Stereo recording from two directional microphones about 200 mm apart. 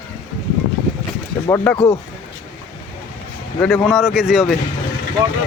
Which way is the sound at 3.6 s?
Centre (ahead or behind).